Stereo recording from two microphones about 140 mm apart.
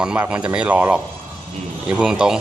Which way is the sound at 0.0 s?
5° right (ahead or behind).